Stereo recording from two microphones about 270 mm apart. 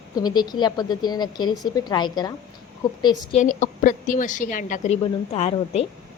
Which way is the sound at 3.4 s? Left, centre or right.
Left.